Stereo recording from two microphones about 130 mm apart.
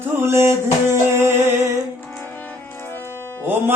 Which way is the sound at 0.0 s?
20° right (ahead or behind).